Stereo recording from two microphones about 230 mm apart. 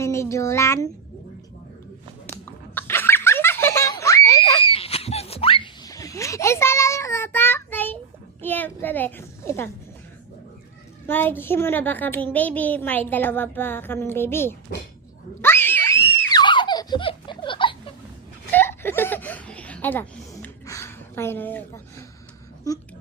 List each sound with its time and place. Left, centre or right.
0.0 s a sound: centre
2.3 s giggle: centre
4.7 s a sound: left; by 7.9 s centre
8.4 s a child's voice: centre
11.0 s a child's voice: centre
15.4 s screaming: centre
16.4 s baby laughter: centre
18.5 s laughter: centre